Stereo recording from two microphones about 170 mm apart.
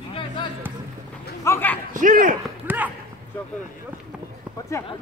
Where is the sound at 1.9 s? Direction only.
50° right (ahead or behind).